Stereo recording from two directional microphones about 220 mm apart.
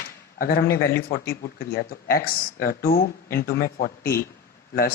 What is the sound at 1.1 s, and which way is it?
Speech, 45° left (ahead or behind).